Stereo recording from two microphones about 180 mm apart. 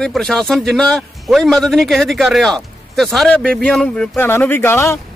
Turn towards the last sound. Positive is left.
turn(degrees=15)  # may be behind; listen again after turning